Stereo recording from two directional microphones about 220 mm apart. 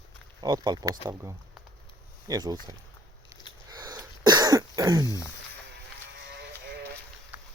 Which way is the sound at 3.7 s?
15° right (ahead or behind).